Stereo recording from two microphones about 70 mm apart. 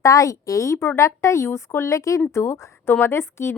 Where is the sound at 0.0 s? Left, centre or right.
Left.